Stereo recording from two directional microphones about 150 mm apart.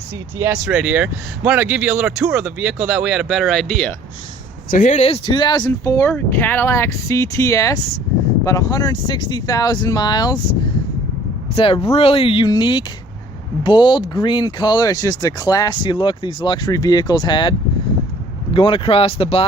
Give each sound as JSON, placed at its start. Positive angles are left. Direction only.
{"t": 0.3, "sound": "speech", "side_deg": -20}
{"t": 0.6, "sound": "speech", "side_deg": -10}
{"t": 4.7, "sound": "speech", "side_deg": 55}
{"t": 5.0, "sound": "speech", "side_deg": 35}
{"t": 11.5, "sound": "speech", "side_deg": 40}
{"t": 18.5, "sound": "speech", "side_deg": 35}